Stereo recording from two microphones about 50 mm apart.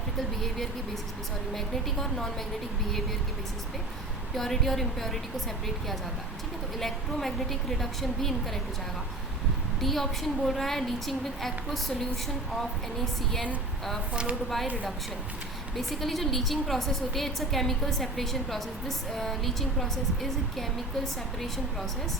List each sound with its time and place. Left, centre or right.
0.4 s a woman's voice: centre
4.4 s a woman's voice: centre
6.7 s a woman's voice: centre
9.8 s a woman's voice: centre
14.1 s speech: right
15.7 s a woman's voice: centre